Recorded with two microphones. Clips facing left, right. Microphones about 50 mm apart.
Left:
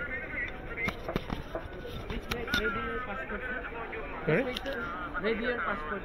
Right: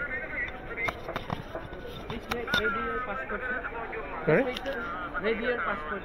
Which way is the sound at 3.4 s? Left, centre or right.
Right.